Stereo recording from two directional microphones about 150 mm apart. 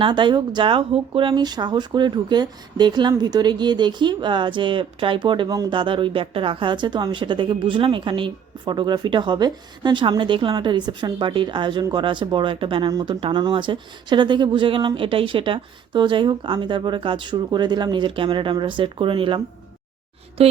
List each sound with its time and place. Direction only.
0.0 s speech: 30° right (ahead or behind)
20.4 s speech: 40° right (ahead or behind)